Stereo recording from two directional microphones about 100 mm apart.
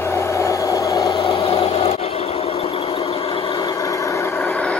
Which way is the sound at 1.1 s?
65° left (ahead or behind).